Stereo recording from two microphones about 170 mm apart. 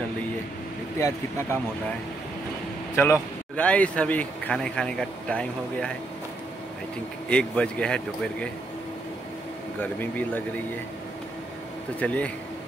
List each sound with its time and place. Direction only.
0.9 s a man's voice: 15° left (ahead or behind)
3.0 s a man's voice: 10° left (ahead or behind)
7.2 s speech: 5° left (ahead or behind)
9.8 s a man's voice: 10° left (ahead or behind)
12.0 s a man's voice: 10° left (ahead or behind)